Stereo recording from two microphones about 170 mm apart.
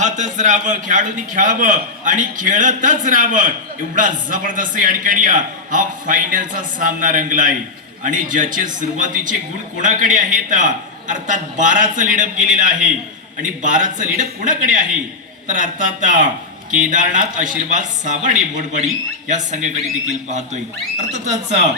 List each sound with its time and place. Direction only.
0.0 s a man's voice: 45° right (ahead or behind)